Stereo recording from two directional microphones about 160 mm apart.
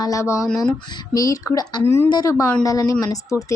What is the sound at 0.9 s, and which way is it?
Speech, 20° left (ahead or behind).